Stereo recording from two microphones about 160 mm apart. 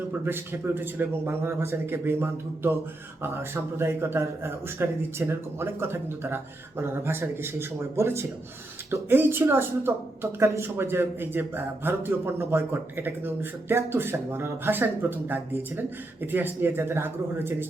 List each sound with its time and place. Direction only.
0.3 s a man's voice: 15° right (ahead or behind)